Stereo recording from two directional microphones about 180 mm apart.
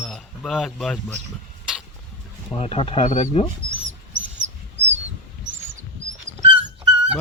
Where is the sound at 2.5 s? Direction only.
30° left (ahead or behind).